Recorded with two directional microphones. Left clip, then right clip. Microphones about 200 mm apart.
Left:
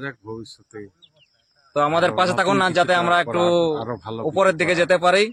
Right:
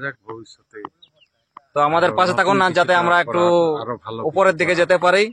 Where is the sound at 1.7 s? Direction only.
15° right (ahead or behind).